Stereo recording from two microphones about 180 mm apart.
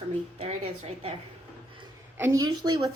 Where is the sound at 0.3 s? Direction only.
35° right (ahead or behind).